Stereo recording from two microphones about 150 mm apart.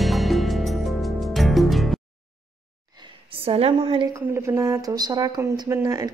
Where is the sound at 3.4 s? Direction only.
40° right (ahead or behind).